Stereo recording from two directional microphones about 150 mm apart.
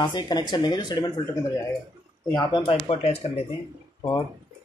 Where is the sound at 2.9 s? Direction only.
45° left (ahead or behind).